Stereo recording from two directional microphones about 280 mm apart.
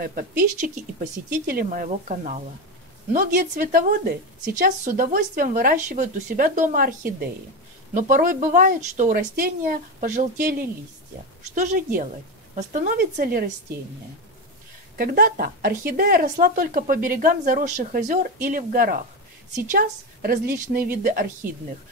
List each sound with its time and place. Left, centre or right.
0.0 s a woman's voice: right
15.0 s a woman's voice: right